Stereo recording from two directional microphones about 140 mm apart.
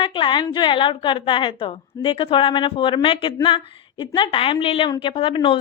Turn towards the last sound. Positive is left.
turn(degrees=40)  # may be behind; listen again after turning